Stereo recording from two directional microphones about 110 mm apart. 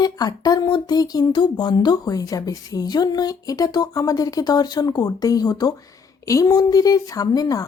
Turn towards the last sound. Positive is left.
turn(degrees=35)  # may be behind; listen again after turning